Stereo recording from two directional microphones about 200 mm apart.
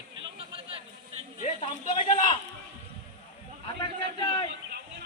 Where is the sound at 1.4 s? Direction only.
35° left (ahead or behind).